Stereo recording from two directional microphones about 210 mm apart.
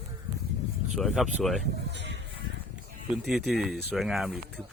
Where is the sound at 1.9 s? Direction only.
55° right (ahead or behind).